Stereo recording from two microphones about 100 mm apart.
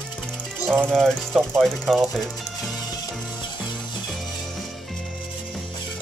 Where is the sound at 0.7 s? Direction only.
5° left (ahead or behind).